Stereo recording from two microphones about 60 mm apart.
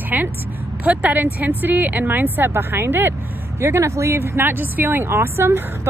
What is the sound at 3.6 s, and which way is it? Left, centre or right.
Speech, right.